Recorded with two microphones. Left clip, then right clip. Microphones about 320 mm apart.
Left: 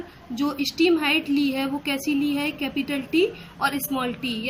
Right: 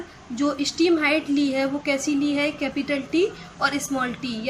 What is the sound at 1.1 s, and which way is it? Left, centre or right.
Speech, right.